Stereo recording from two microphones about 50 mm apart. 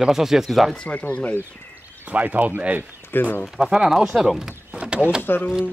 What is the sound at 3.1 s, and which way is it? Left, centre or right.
Speech, left.